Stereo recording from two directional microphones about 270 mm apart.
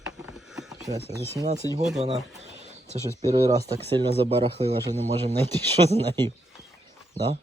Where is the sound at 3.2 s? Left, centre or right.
Centre.